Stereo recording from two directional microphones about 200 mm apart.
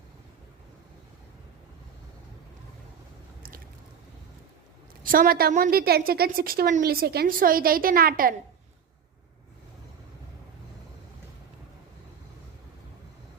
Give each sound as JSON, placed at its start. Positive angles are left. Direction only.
{"t": 5.0, "sound": "a woman's voice", "side_deg": -45}